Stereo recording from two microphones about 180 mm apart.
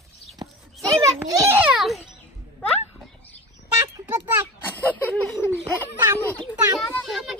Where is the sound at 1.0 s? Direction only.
20° right (ahead or behind); by 2.1 s centre (ahead or behind).